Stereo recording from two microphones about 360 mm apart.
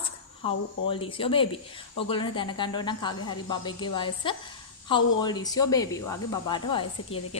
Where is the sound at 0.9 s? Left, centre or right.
Centre.